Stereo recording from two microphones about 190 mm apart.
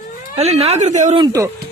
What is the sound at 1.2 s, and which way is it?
Speech, 20° right (ahead or behind).